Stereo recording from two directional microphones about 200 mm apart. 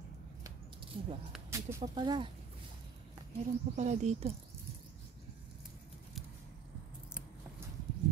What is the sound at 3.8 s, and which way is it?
Speech, 35° right (ahead or behind).